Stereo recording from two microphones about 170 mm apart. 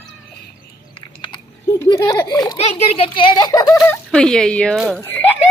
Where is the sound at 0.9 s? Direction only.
30° left (ahead or behind).